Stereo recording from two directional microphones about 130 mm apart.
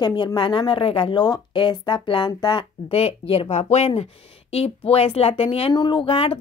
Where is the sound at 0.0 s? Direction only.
35° left (ahead or behind).